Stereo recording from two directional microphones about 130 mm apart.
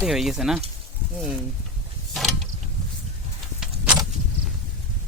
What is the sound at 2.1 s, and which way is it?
Mechanisms, centre (ahead or behind).